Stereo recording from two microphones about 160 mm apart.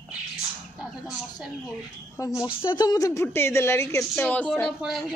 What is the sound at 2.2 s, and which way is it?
A woman's voice, 20° left (ahead or behind).